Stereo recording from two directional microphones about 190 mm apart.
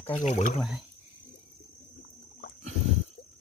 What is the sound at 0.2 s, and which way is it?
Speech, 40° left (ahead or behind).